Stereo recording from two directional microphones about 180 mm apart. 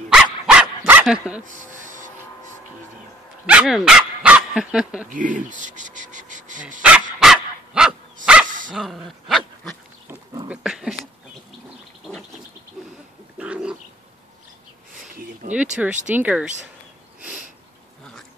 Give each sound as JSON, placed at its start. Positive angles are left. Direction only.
{"t": 0.1, "sound": "dog", "side_deg": -5}
{"t": 1.4, "sound": "a sound", "side_deg": -45}
{"t": 3.4, "sound": "speech", "side_deg": -5}
{"t": 5.1, "sound": "a sound", "side_deg": -45}
{"t": 6.8, "sound": "dog", "side_deg": -5}
{"t": 8.5, "sound": "dog", "side_deg": -45}
{"t": 8.7, "sound": "dog", "side_deg": 0}
{"t": 10.5, "sound": "a sound", "side_deg": -5}
{"t": 13.4, "sound": "bird", "side_deg": -5}
{"t": 15.5, "sound": "speech", "side_deg": -5}
{"t": 17.2, "sound": "sniff", "side_deg": -5}